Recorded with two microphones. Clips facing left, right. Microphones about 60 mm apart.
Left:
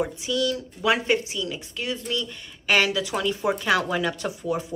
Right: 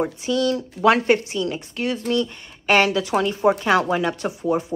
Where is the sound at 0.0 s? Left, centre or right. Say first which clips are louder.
Right 4 dB; right.